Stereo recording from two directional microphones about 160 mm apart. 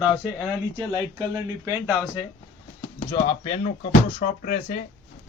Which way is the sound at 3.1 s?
40° left (ahead or behind).